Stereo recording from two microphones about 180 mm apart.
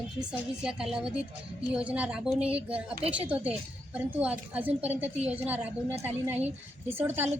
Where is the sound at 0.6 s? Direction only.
5° right (ahead or behind).